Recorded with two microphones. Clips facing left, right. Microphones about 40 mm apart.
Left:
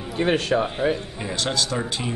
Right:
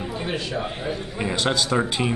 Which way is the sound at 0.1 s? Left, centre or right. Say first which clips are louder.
Left 10 dB; left.